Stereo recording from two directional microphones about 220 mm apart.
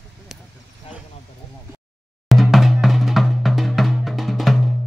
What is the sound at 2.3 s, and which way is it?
Drum, centre (ahead or behind).